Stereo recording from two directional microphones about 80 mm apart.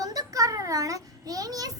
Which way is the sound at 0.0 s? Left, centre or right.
Right.